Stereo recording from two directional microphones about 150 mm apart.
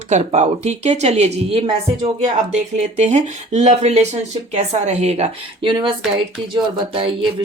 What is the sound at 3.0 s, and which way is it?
Speech, 50° right (ahead or behind).